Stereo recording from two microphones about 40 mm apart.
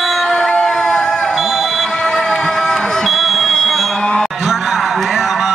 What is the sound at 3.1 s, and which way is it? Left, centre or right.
Buzzer, centre.